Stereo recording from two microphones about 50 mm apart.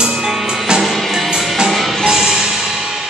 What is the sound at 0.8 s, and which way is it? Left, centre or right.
Music, centre.